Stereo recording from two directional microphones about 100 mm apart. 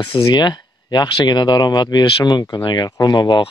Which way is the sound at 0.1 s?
45° left (ahead or behind).